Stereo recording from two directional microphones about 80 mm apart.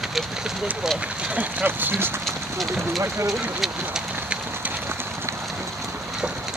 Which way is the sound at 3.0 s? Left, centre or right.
Right.